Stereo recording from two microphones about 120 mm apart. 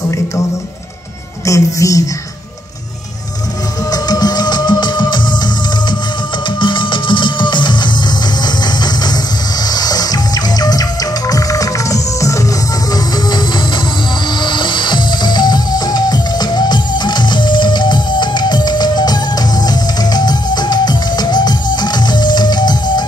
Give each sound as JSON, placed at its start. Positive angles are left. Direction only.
{"t": 1.4, "sound": "speech", "side_deg": 25}
{"t": 3.9, "sound": "music", "side_deg": 35}